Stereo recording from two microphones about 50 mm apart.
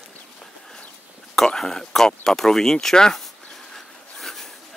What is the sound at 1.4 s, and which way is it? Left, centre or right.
Speech, centre.